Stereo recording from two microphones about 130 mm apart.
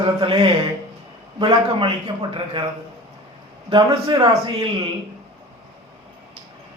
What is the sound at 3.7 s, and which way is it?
A man's voice, 40° right (ahead or behind).